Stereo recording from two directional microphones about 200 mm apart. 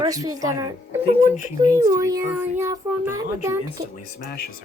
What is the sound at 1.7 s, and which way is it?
Speech, 15° right (ahead or behind).